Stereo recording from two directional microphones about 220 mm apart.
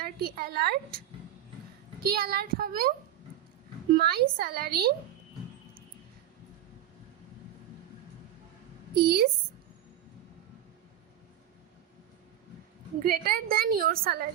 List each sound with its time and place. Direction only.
0.0 s a woman's voice: 45° right (ahead or behind)
2.0 s a woman's voice: 45° right (ahead or behind)
3.9 s a woman's voice: 45° right (ahead or behind)
9.0 s a woman's voice: 45° right (ahead or behind)
13.0 s a woman's voice: 40° right (ahead or behind)